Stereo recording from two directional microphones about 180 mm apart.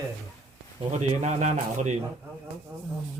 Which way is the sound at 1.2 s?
40° right (ahead or behind).